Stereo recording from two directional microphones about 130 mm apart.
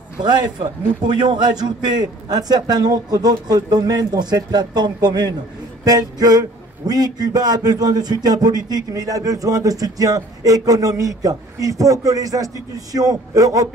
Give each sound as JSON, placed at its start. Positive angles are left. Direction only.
{"t": 0.2, "sound": "a man's voice", "side_deg": -35}